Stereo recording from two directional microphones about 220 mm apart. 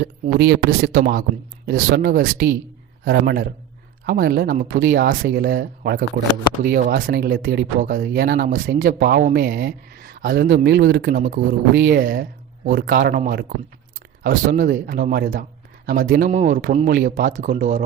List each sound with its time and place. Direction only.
0.0 s speech: 50° right (ahead or behind)